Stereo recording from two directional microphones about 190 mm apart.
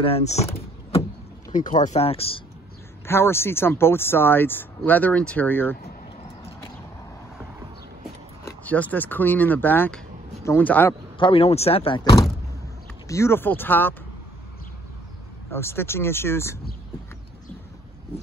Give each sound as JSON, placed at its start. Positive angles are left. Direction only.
{"t": 0.0, "sound": "speech", "side_deg": 35}
{"t": 3.1, "sound": "speech", "side_deg": 10}
{"t": 8.5, "sound": "speech", "side_deg": 10}
{"t": 11.1, "sound": "speech", "side_deg": 30}
{"t": 15.5, "sound": "speech", "side_deg": 10}